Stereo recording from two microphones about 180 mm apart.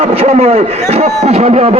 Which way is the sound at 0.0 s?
35° right (ahead or behind).